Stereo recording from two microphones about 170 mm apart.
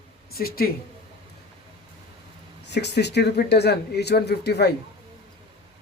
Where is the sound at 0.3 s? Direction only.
60° left (ahead or behind).